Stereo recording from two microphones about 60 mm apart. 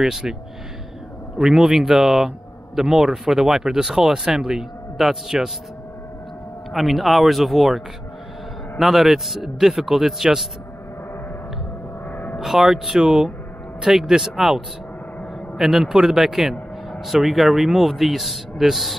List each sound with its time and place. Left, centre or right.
0.0 s a man's voice: centre
1.4 s a man's voice: centre
6.7 s speech: centre
12.1 s gong: left
12.4 s a man's voice: centre